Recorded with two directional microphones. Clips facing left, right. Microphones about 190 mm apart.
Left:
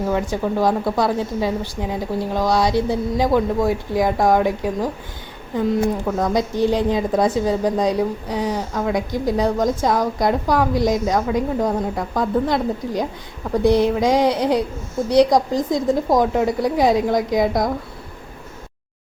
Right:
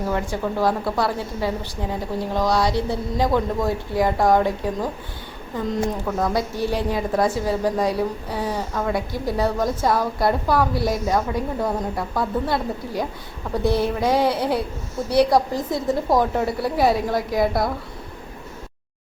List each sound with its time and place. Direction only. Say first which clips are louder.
0.1 s a woman's voice: left 3 dB; 15° left (ahead or behind)
6.2 s a woman's voice: left 5 dB; 20° left (ahead or behind)